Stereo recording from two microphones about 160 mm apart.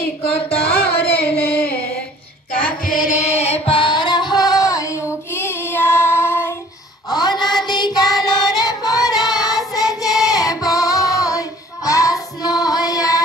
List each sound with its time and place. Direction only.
0.6 s a sound: 80° left
1.2 s singing: 80° left
2.8 s music: 60° left (ahead or behind); by 6.5 s 15° left (ahead or behind)
7.1 s child singing: 25° left (ahead or behind)